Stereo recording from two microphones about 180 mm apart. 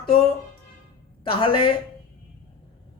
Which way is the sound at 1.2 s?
30° left (ahead or behind).